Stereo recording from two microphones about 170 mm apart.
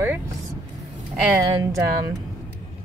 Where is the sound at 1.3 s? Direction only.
20° right (ahead or behind).